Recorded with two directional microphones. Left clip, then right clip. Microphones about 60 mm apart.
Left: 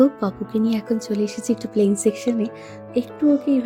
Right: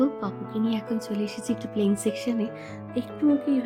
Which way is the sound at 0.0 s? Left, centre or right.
Left.